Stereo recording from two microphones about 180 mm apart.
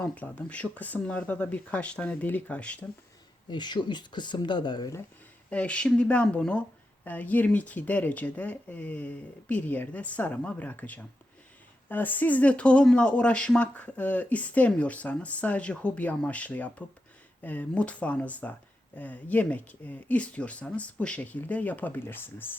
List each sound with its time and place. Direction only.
0.0 s speech: 10° left (ahead or behind)
3.5 s speech: 25° left (ahead or behind)
5.5 s speech: 5° left (ahead or behind)